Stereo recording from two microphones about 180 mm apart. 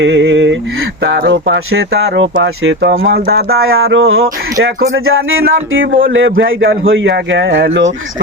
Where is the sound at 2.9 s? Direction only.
60° right (ahead or behind).